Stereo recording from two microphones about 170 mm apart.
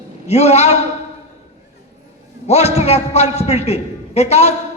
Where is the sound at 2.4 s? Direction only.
40° left (ahead or behind).